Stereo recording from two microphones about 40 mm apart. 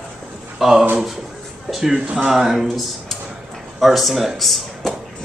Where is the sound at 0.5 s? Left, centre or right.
Centre.